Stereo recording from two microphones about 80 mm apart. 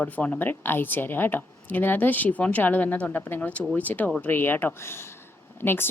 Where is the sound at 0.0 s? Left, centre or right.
Centre.